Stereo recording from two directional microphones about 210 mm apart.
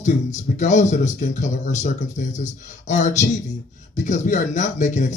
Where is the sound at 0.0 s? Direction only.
35° left (ahead or behind).